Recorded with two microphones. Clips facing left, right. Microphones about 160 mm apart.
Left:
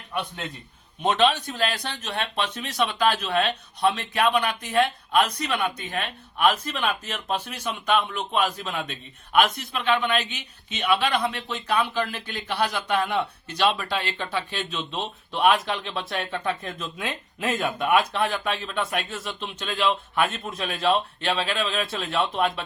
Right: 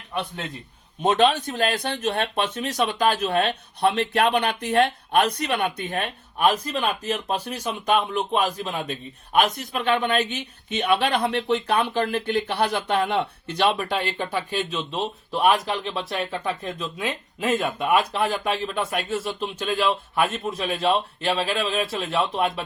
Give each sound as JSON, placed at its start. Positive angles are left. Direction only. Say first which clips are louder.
{"t": 1.0, "sound": "speech", "louder": "right 2 dB", "side_deg": -50}
{"t": 13.1, "sound": "speech", "louder": "right 2 dB", "side_deg": -20}
{"t": 14.8, "sound": "speech", "louder": "right 3 dB", "side_deg": -5}